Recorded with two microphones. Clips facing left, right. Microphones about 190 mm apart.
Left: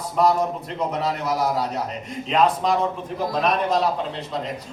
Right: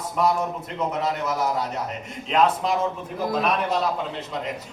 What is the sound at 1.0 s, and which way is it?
Speech, 35° left (ahead or behind).